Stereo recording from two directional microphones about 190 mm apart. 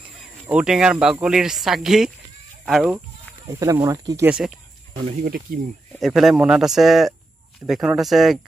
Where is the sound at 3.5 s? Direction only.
15° right (ahead or behind).